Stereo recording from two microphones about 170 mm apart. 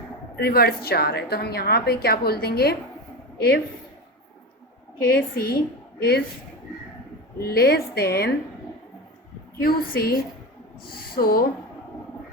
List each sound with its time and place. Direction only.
0.3 s a woman's voice: 65° left (ahead or behind)
4.9 s a woman's voice: 65° left (ahead or behind)
7.3 s a woman's voice: 65° left (ahead or behind)
9.6 s a woman's voice: 60° left (ahead or behind)